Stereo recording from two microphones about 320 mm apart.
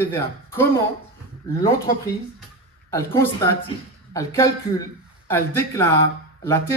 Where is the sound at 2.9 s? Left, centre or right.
Centre.